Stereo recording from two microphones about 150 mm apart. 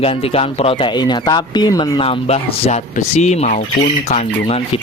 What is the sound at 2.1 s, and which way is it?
Speech, 45° left (ahead or behind).